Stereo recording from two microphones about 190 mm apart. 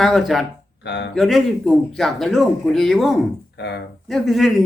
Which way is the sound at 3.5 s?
65° left (ahead or behind).